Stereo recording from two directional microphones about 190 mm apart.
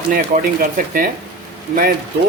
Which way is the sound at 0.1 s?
50° right (ahead or behind).